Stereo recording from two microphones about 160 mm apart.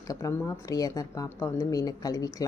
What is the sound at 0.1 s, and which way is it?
A woman's voice, 20° left (ahead or behind).